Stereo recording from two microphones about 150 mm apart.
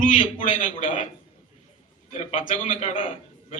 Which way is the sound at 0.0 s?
60° left (ahead or behind).